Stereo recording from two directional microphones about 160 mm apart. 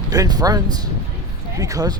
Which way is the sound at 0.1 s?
25° right (ahead or behind).